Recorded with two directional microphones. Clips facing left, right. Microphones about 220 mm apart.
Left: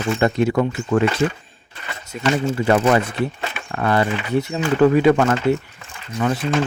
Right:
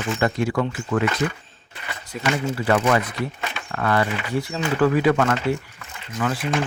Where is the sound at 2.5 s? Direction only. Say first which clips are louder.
Left 3 dB; 25° left (ahead or behind).